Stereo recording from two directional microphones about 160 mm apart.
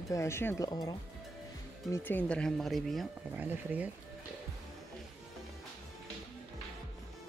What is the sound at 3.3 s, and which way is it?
Speech, 10° right (ahead or behind).